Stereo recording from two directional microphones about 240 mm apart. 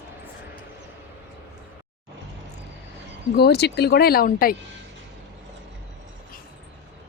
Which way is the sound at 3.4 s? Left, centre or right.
Left.